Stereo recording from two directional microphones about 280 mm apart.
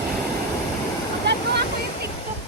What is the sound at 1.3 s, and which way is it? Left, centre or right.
Waterfall, right.